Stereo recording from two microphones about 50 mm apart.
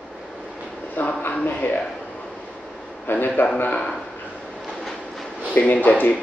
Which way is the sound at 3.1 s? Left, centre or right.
Left.